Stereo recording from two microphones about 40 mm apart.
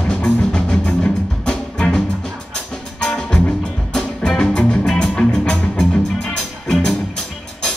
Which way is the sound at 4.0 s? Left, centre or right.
Centre.